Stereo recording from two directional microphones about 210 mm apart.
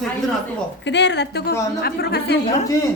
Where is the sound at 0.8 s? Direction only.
55° left (ahead or behind).